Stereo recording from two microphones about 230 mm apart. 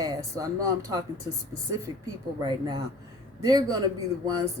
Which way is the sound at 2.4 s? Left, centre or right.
Centre.